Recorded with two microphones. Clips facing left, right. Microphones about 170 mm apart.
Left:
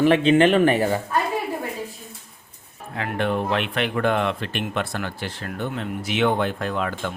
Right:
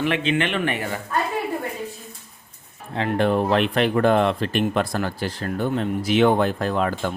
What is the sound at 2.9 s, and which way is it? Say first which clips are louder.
Speech: right 4 dB; 30° right (ahead or behind).